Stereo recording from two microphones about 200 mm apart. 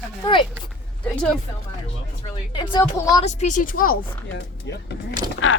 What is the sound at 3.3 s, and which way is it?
Speech, 35° left (ahead or behind).